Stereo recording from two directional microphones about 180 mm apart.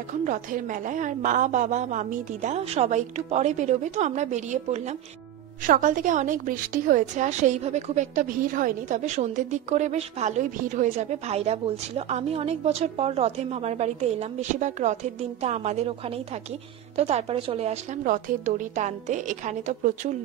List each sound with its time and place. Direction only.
0.2 s a woman's voice: 45° right (ahead or behind)
16.9 s a woman's voice: 35° right (ahead or behind)